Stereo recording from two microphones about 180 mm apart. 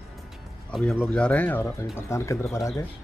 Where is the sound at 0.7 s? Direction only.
5° left (ahead or behind).